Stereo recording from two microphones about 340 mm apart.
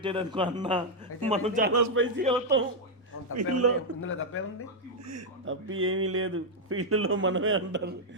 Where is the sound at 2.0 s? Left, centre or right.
Right.